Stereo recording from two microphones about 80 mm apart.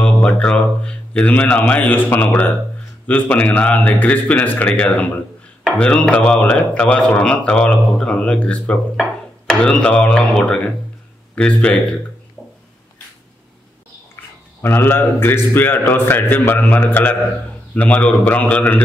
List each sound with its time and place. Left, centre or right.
0.0 s a man's voice: centre
14.1 s a man's voice: left